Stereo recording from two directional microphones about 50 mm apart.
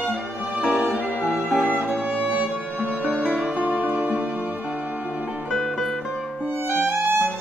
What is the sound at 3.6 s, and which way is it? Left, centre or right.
Music, right.